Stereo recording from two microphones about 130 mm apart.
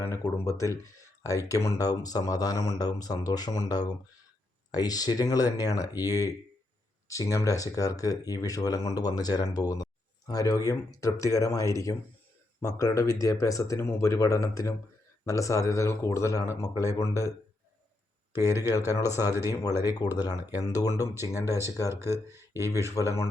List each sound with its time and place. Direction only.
0.0 s speech: 25° left (ahead or behind)
18.7 s speech: 25° left (ahead or behind)
19.1 s speech: 20° right (ahead or behind)
19.5 s speech: 25° left (ahead or behind)
21.9 s speech: 20° right (ahead or behind)
23.0 s speech: 20° left (ahead or behind)